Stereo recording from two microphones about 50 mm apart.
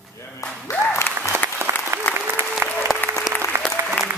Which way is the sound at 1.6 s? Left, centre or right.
Right.